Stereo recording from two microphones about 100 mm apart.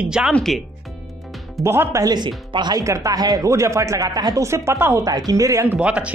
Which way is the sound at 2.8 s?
30° right (ahead or behind).